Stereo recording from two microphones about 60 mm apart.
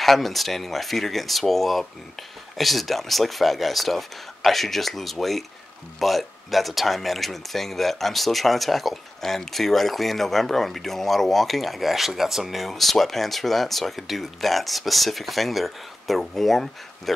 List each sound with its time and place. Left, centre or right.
0.0 s speech: centre